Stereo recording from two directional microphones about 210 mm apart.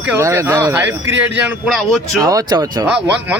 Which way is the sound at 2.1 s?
15° right (ahead or behind).